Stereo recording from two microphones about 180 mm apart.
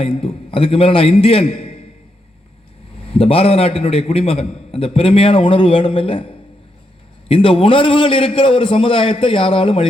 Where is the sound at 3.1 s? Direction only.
30° left (ahead or behind).